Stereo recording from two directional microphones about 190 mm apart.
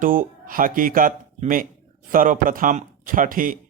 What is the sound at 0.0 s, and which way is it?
Speech, 45° right (ahead or behind).